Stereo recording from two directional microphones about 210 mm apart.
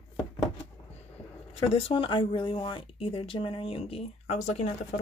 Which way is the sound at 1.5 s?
25° left (ahead or behind).